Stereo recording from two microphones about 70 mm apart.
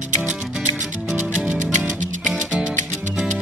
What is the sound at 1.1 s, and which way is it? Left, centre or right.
Music, right.